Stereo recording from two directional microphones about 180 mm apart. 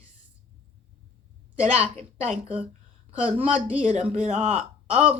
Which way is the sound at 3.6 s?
40° right (ahead or behind).